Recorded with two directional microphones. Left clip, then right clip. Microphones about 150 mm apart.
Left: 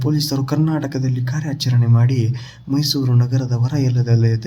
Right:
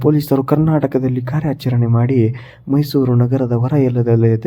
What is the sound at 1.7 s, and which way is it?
Speech, 35° right (ahead or behind).